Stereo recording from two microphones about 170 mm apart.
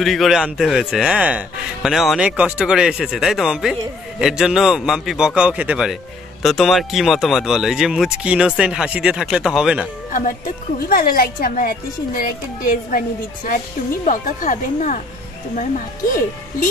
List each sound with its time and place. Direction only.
0.0 s a man's voice: centre (ahead or behind)
10.9 s a woman's voice: 60° left (ahead or behind)
14.0 s speech: 50° left (ahead or behind)